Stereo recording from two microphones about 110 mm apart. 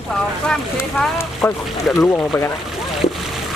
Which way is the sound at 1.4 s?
25° left (ahead or behind).